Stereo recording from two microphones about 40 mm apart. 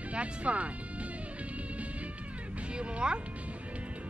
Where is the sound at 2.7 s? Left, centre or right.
Right.